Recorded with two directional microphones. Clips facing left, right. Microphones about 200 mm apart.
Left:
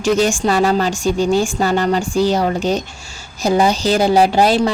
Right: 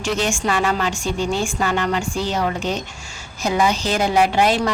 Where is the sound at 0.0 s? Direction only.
40° left (ahead or behind).